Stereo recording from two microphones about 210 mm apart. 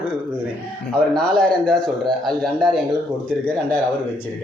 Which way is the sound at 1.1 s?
5° left (ahead or behind).